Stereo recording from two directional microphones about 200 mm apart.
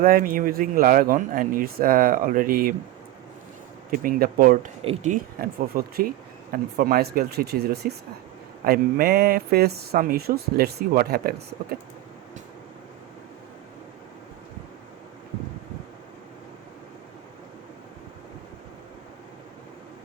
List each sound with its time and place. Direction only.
0.0 s speech: 45° right (ahead or behind)
3.9 s speech: 45° right (ahead or behind)
4.8 s speech: 30° right (ahead or behind)
5.1 s speech: 45° right (ahead or behind)